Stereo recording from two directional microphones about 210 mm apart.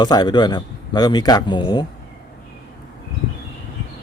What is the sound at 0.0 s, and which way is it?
Speech, 20° left (ahead or behind).